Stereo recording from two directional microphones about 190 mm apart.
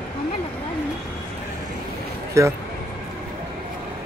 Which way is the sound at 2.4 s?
15° right (ahead or behind).